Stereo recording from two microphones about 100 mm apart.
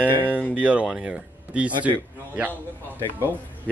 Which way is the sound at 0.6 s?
10° right (ahead or behind).